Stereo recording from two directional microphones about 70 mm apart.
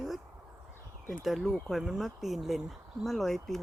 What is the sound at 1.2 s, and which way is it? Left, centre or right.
Speech, centre.